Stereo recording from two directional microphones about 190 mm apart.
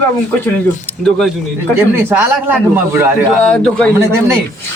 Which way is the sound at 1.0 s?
5° left (ahead or behind).